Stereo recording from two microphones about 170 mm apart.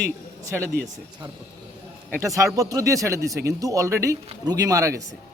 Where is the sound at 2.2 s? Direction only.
20° right (ahead or behind).